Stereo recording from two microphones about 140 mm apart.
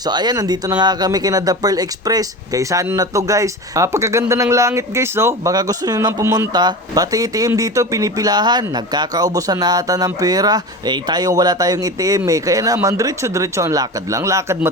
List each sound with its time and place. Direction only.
0.0 s speech: 30° right (ahead or behind)